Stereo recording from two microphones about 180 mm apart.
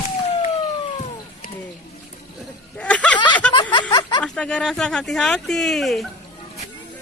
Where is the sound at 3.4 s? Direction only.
5° left (ahead or behind).